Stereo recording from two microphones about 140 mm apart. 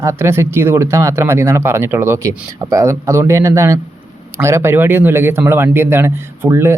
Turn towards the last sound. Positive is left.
turn(degrees=-20)  # may be behind; listen again after turning